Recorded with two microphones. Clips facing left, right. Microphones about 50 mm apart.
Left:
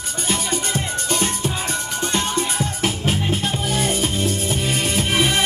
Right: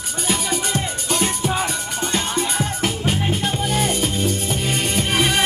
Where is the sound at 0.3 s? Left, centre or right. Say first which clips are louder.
Right 1 dB; centre.